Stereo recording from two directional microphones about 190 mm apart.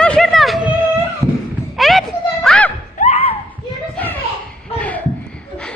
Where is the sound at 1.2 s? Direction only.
20° right (ahead or behind).